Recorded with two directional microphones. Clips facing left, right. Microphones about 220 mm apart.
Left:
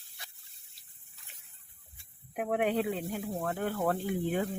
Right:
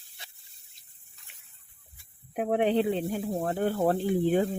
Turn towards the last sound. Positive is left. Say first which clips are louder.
# right 7 dB
turn(degrees=-30)  # may be behind; listen again after turning